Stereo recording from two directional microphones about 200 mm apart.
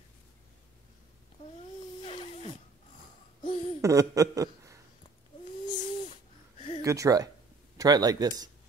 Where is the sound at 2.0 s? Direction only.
30° left (ahead or behind).